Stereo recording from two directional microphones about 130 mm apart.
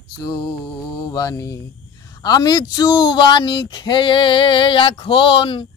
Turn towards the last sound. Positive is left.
turn(degrees=45)  # may be behind; listen again after turning